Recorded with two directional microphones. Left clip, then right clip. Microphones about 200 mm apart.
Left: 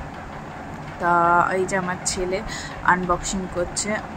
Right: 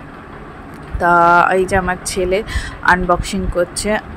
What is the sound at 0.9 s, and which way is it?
Speech, 25° right (ahead or behind).